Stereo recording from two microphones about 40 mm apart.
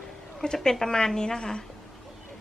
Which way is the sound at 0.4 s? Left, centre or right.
Centre.